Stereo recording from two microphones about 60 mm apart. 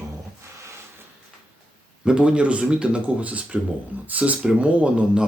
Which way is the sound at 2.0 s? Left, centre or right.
Centre.